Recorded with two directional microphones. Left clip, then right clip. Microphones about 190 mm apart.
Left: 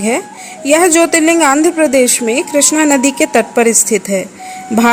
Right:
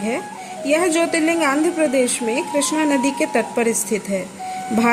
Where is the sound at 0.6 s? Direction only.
30° left (ahead or behind).